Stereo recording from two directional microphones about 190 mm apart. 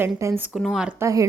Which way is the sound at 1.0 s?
15° right (ahead or behind).